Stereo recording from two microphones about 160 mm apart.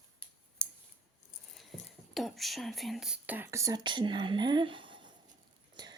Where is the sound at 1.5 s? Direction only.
Centre (ahead or behind).